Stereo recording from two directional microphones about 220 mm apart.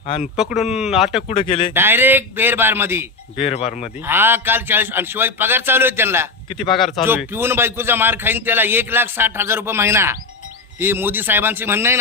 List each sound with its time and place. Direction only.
0.0 s speech: 25° left (ahead or behind)
0.3 s speech: centre (ahead or behind)
1.3 s speech: 25° left (ahead or behind)
1.7 s speech: 10° right (ahead or behind)
3.3 s speech: 25° left (ahead or behind)
4.0 s speech: 10° right (ahead or behind)
6.5 s speech: 25° left (ahead or behind)
6.7 s speech: centre (ahead or behind)
7.1 s speech: 10° right (ahead or behind)